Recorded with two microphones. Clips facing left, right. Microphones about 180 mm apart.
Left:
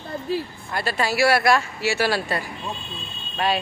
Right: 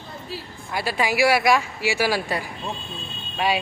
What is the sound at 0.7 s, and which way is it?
Speech, 10° right (ahead or behind).